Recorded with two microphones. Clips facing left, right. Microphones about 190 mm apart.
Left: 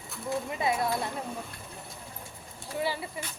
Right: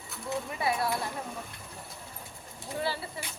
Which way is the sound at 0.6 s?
20° left (ahead or behind).